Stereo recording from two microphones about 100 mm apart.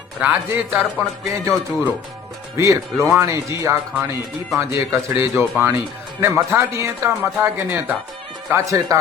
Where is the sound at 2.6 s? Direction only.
30° right (ahead or behind).